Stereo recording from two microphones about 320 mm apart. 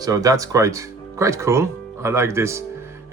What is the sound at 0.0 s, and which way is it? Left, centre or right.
Speech, centre.